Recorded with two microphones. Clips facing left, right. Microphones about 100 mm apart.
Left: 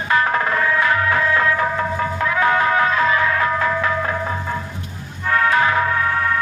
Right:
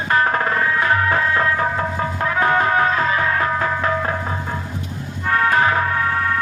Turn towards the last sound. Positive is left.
turn(degrees=-35)  # may be behind; listen again after turning